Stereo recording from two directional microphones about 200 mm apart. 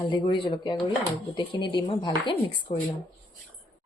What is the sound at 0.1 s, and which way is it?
Speech, 25° left (ahead or behind).